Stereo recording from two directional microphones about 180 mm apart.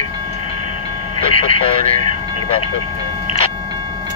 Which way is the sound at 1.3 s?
30° left (ahead or behind).